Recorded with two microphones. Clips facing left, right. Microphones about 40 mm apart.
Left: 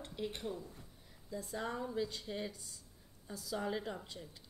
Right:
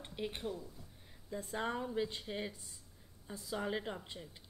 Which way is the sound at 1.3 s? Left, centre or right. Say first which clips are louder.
Right 2 dB; right.